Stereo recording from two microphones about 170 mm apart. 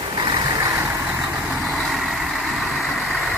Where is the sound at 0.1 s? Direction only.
25° right (ahead or behind).